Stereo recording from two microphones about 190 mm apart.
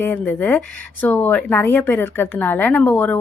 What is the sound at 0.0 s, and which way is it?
Speech, 10° left (ahead or behind).